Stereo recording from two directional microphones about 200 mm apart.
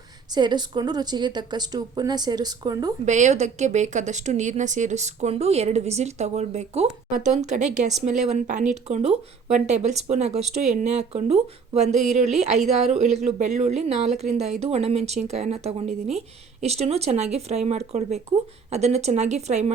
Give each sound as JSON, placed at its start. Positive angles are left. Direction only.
{"t": 0.3, "sound": "a woman's voice", "side_deg": -20}
{"t": 3.1, "sound": "speech", "side_deg": -35}